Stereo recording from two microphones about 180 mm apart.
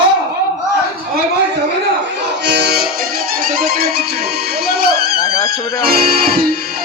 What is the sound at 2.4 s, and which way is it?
Music, 70° right (ahead or behind).